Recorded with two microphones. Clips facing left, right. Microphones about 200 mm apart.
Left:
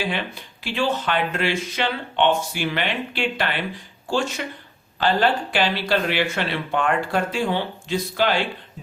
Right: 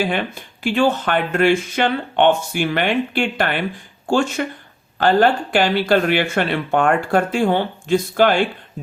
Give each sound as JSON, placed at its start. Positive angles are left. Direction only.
{"t": 0.0, "sound": "speech", "side_deg": -50}